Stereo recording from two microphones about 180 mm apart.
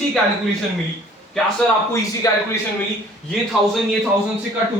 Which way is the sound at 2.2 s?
20° left (ahead or behind).